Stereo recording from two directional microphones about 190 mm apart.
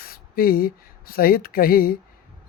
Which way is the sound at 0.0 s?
50° left (ahead or behind).